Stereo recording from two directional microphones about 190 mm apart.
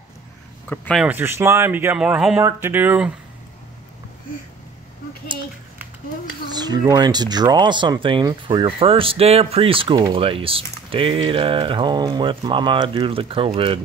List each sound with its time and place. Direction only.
0.7 s speech: 5° left (ahead or behind)
1.0 s speech: 10° right (ahead or behind)
6.5 s speech: 20° right (ahead or behind)